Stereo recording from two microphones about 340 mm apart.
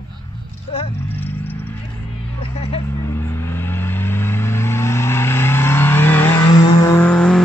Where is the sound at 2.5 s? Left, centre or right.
Centre.